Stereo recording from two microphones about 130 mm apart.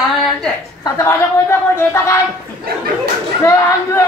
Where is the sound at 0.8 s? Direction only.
20° left (ahead or behind).